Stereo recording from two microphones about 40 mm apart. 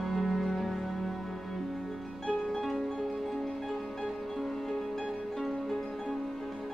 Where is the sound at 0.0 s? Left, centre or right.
Centre.